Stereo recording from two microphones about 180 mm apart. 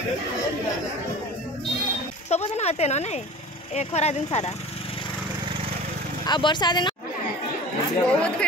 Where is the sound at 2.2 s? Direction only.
35° left (ahead or behind).